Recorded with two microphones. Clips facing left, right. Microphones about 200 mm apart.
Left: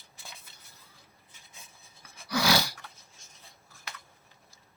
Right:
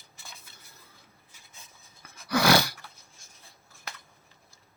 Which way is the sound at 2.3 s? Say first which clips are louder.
Right 5 dB; 55° right (ahead or behind).